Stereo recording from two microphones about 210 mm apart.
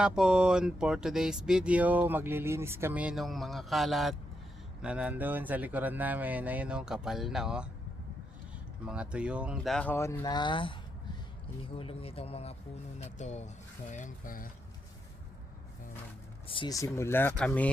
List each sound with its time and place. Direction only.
0.0 s speech: 5° right (ahead or behind)
8.9 s speech: 5° right (ahead or behind); by 10.8 s 25° left (ahead or behind)
11.8 s speech: 25° left (ahead or behind)
16.5 s speech: 20° left (ahead or behind)